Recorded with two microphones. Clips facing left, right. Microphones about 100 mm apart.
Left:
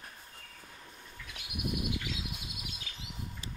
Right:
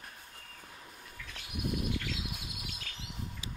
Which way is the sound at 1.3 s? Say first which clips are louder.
Right 1 dB; 15° left (ahead or behind).